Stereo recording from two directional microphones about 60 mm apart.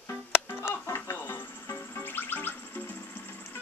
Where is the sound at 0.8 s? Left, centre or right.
Left.